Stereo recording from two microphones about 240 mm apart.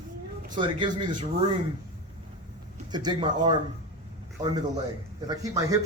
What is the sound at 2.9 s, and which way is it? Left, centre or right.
Speech, centre.